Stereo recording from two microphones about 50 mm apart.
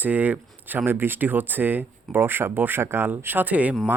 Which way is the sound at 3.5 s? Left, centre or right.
Right.